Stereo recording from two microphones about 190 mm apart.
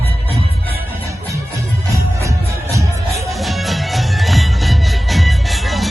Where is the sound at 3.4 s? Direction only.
Centre (ahead or behind).